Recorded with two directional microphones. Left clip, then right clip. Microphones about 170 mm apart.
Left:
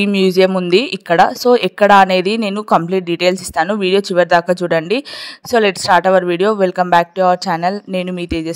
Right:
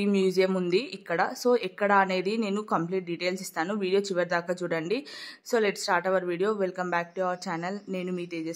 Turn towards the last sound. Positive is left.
turn(degrees=45)  # may be behind; listen again after turning